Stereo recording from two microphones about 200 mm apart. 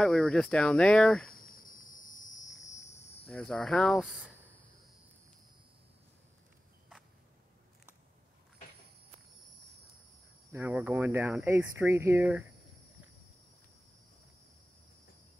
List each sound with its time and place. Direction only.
0.0 s speech: centre (ahead or behind)
1.3 s cricket: 45° left (ahead or behind)
3.3 s speech: 5° left (ahead or behind)
10.5 s speech: 10° right (ahead or behind)